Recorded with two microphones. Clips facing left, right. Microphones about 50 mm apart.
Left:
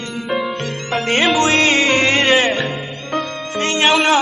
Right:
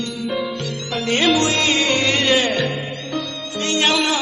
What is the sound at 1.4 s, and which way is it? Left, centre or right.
Music, left.